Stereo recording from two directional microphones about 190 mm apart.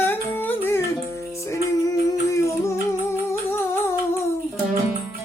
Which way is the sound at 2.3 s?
15° left (ahead or behind).